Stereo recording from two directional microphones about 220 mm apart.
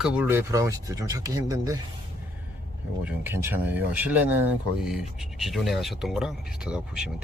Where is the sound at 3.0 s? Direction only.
10° right (ahead or behind).